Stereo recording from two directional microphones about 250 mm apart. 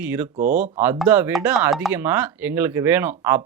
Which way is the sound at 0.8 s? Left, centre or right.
Centre.